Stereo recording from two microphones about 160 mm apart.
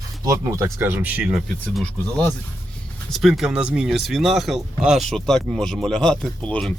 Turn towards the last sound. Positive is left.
turn(degrees=5)  # may be behind; listen again after turning